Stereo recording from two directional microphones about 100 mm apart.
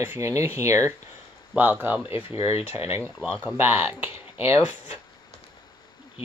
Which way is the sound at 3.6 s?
20° right (ahead or behind).